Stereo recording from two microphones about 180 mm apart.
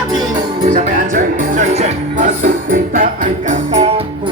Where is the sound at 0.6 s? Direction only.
45° right (ahead or behind).